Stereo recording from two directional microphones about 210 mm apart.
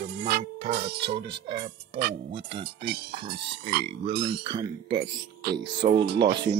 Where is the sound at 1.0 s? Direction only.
25° right (ahead or behind).